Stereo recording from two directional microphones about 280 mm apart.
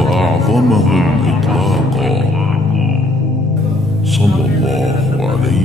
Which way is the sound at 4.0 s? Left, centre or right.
Centre.